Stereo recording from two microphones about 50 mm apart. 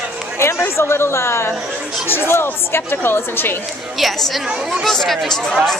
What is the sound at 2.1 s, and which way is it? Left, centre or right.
A woman's voice, left.